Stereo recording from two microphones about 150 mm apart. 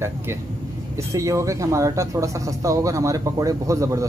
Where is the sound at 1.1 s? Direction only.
20° right (ahead or behind).